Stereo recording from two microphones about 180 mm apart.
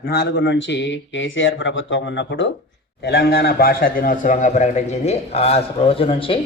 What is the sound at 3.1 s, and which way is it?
A man's voice, 60° left (ahead or behind).